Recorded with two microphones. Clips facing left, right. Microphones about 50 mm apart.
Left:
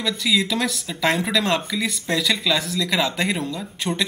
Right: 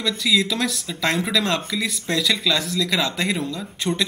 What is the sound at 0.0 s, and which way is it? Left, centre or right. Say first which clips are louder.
Speech: right 1 dB; centre.